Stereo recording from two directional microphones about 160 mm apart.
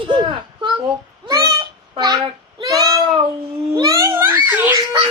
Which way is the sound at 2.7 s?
25° right (ahead or behind).